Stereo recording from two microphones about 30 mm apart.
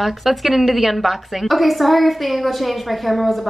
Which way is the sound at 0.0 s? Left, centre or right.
Centre.